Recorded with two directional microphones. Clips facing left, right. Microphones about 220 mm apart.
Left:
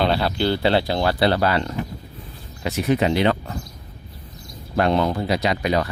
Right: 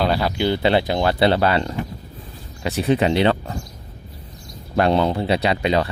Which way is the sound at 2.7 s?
30° right (ahead or behind).